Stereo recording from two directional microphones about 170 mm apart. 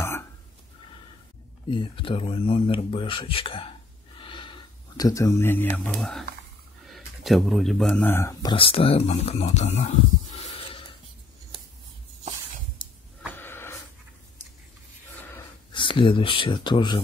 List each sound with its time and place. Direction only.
1.7 s speech: 30° left (ahead or behind)
13.4 s wheeze: 15° left (ahead or behind)
15.7 s speech: 30° left (ahead or behind)